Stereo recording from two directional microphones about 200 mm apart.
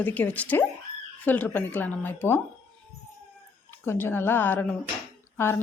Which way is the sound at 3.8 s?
10° left (ahead or behind).